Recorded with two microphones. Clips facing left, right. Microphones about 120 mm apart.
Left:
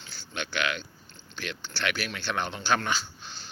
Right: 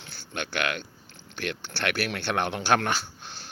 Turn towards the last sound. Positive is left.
turn(degrees=-60)  # may be behind; listen again after turning